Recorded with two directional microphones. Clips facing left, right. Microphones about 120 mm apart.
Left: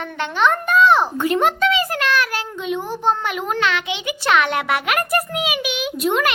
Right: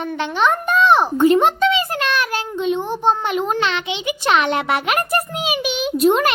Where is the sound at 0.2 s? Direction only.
15° right (ahead or behind).